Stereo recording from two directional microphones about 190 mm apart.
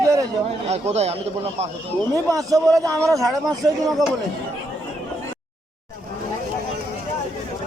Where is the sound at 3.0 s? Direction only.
Centre (ahead or behind).